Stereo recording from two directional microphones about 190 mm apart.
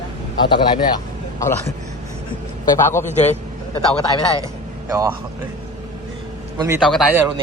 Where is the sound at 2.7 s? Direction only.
15° left (ahead or behind).